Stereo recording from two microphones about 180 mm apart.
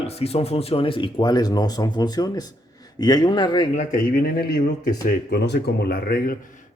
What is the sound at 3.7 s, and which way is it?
A man's voice, 55° left (ahead or behind).